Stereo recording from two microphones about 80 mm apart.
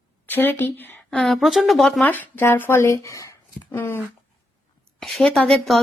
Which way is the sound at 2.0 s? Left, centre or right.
Left.